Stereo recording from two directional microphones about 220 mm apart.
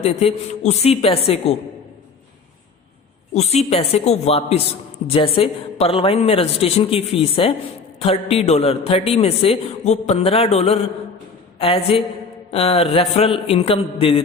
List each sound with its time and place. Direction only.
0.0 s a man's voice: 30° left (ahead or behind)
3.3 s a man's voice: 30° left (ahead or behind)